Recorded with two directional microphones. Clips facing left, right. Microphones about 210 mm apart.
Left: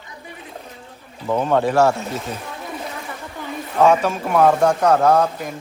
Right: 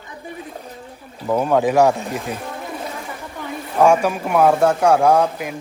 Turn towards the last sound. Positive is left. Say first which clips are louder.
# right 1 dB
turn(degrees=-10)  # may be behind; listen again after turning